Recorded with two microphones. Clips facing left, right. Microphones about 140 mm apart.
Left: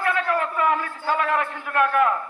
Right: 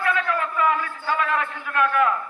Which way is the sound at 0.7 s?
45° left (ahead or behind).